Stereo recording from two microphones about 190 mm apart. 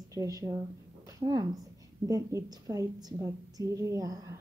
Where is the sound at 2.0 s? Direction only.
20° right (ahead or behind).